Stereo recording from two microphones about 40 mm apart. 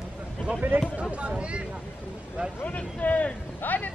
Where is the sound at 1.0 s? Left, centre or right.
Right.